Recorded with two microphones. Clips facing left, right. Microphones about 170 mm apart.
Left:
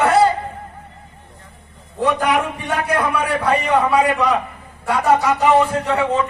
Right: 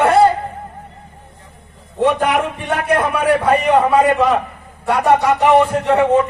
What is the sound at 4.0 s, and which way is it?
Speech, centre (ahead or behind).